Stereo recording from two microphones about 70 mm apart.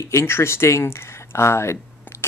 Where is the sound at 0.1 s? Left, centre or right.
Left.